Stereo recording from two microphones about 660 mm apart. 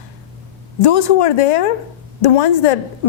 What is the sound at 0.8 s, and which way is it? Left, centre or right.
A woman's voice, left.